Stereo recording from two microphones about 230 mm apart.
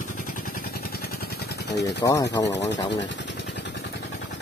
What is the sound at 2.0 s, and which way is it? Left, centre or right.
Speech, centre.